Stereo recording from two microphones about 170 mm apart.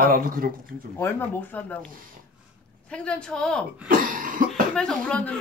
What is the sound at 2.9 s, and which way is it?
Speech, 5° left (ahead or behind).